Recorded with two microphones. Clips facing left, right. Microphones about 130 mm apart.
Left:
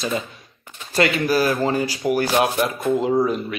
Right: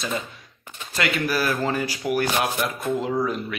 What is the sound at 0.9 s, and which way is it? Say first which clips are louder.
Speech: left 6 dB; 30° left (ahead or behind).